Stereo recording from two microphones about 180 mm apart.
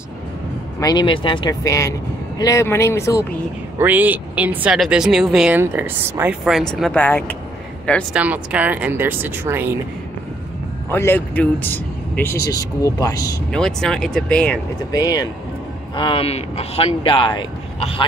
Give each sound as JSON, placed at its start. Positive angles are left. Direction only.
{"t": 0.7, "sound": "speech", "side_deg": 20}
{"t": 3.7, "sound": "speech", "side_deg": -10}
{"t": 8.1, "sound": "speech", "side_deg": -5}
{"t": 10.9, "sound": "speech", "side_deg": 10}
{"t": 13.5, "sound": "speech", "side_deg": 5}
{"t": 14.9, "sound": "speech", "side_deg": 20}